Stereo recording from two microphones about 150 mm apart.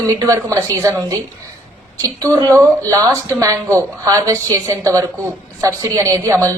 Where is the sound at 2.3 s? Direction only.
25° right (ahead or behind).